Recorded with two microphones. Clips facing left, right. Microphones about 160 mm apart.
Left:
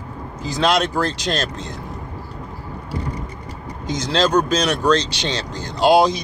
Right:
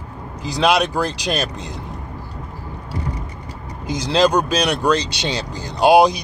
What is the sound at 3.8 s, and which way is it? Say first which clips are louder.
Speech: right 3 dB; 10° right (ahead or behind).